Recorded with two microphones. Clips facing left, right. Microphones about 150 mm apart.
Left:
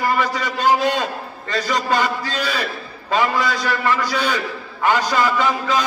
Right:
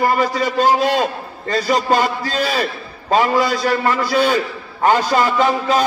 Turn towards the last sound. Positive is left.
turn(degrees=-40)  # may be behind; listen again after turning